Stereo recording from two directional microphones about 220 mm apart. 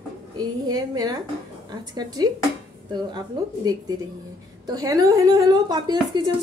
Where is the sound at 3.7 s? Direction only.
15° right (ahead or behind).